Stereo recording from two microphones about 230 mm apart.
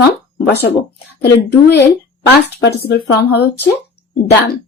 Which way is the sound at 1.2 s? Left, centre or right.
Left.